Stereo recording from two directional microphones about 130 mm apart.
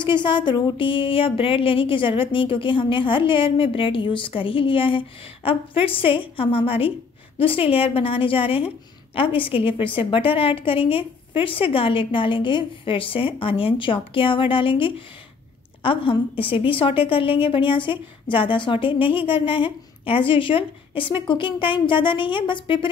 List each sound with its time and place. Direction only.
0.0 s a woman's voice: 40° left (ahead or behind)